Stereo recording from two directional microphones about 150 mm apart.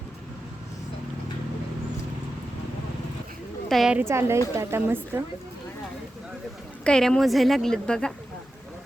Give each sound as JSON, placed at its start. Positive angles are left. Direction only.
{"t": 3.7, "sound": "a woman's voice", "side_deg": 0}
{"t": 3.9, "sound": "speech", "side_deg": -15}
{"t": 6.8, "sound": "a woman's voice", "side_deg": 5}